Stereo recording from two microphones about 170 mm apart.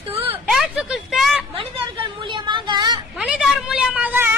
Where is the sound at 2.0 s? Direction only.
30° right (ahead or behind).